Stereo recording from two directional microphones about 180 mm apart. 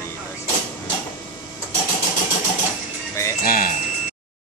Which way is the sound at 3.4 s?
50° left (ahead or behind).